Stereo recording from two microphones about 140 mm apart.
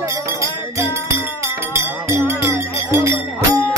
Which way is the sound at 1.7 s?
20° right (ahead or behind).